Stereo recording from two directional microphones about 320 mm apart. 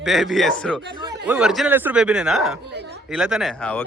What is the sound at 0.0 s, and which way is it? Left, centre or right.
Speech, centre.